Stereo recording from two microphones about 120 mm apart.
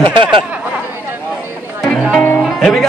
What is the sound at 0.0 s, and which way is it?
Speech, 45° right (ahead or behind).